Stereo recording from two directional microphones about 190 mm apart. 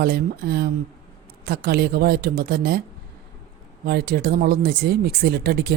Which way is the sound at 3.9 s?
55° right (ahead or behind).